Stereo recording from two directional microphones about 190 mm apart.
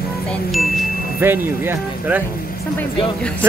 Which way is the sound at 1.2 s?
15° right (ahead or behind).